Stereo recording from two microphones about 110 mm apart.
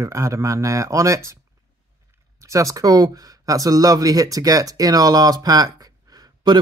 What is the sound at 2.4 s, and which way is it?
Speech, 30° right (ahead or behind).